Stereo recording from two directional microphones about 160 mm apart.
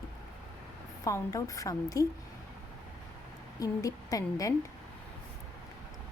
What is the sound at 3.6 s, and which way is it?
Speech, 20° left (ahead or behind).